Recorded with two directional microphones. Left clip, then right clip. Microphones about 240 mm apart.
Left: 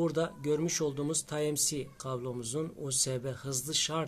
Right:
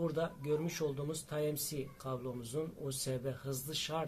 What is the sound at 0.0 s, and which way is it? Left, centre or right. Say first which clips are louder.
Speech: left 5 dB; left.